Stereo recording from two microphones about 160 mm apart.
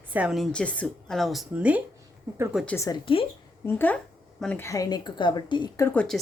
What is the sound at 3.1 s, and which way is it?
Speech, 35° left (ahead or behind).